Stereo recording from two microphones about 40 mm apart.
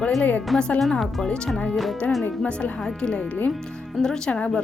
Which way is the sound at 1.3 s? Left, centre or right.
Left.